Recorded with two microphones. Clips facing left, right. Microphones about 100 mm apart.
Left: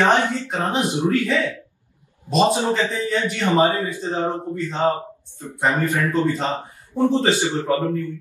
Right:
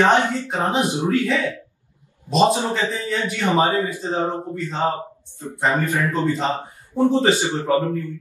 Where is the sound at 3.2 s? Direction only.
20° right (ahead or behind).